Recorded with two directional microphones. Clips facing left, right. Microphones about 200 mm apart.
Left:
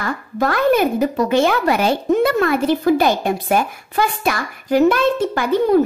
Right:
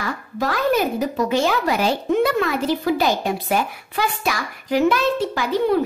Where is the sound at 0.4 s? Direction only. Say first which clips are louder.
Left 4 dB; 55° left (ahead or behind).